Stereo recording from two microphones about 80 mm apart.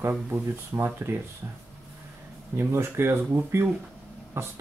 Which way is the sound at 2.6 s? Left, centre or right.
Right.